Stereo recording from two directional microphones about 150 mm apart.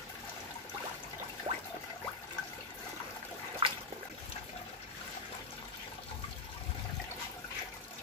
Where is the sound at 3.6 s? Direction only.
35° right (ahead or behind).